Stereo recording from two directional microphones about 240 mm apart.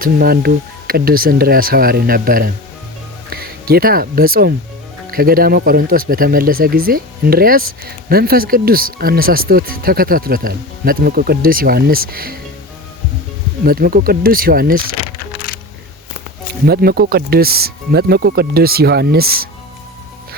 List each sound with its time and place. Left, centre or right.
0.0 s speech: right
13.7 s speech: right
15.5 s music: left
16.6 s speech: right